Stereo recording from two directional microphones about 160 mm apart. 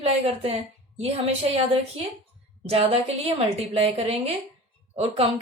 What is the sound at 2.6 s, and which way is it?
A woman's voice, 40° right (ahead or behind).